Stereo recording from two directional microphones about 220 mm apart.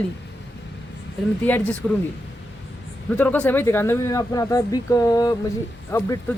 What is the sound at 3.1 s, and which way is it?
Speech, 5° left (ahead or behind).